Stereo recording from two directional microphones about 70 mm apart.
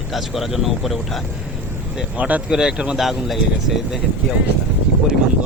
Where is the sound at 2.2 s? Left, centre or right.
Right.